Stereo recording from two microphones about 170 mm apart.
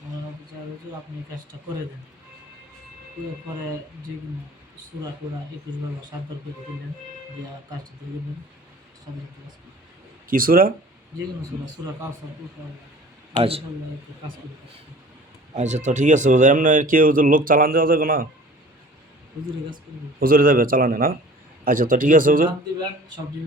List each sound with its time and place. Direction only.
10.2 s a man's voice: 55° right (ahead or behind)
15.5 s speech: 45° right (ahead or behind)
20.1 s a man's voice: 60° right (ahead or behind)
22.8 s speech: 25° right (ahead or behind)